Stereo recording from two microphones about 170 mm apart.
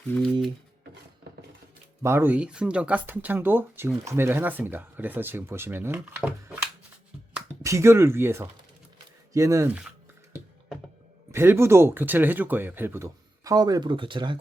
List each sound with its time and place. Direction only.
2.0 s speech: 15° right (ahead or behind)
11.3 s speech: 15° right (ahead or behind)